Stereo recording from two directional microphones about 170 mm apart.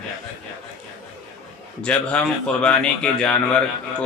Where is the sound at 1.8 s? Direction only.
5° left (ahead or behind).